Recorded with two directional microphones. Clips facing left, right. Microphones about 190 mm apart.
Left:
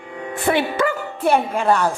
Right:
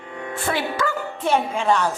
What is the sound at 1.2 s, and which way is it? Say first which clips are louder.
Speech: left 3 dB; 10° left (ahead or behind).